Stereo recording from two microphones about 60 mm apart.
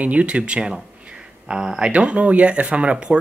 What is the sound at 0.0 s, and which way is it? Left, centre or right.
Speech, right.